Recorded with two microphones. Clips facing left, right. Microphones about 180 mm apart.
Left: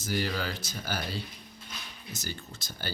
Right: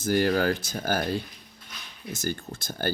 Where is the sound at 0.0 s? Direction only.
55° right (ahead or behind).